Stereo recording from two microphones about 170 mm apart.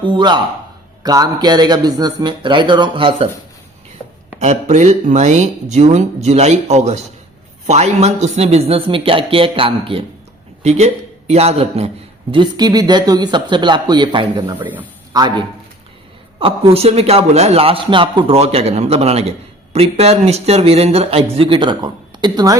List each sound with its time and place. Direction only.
0.0 s a man's voice: 25° right (ahead or behind)
4.4 s a man's voice: 45° right (ahead or behind)
12.3 s a man's voice: 25° right (ahead or behind)
14.6 s a man's voice: 10° right (ahead or behind)
15.1 s a man's voice: 25° right (ahead or behind)